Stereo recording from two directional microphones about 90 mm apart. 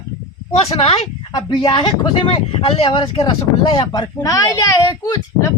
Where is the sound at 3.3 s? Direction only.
70° left (ahead or behind).